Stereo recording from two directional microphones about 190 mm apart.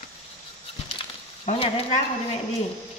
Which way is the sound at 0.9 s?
30° left (ahead or behind).